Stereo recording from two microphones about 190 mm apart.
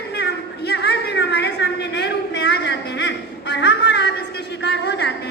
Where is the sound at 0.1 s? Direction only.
60° left (ahead or behind).